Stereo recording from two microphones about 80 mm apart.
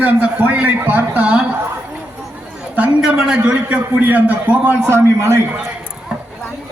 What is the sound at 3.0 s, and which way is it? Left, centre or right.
A man's voice, centre.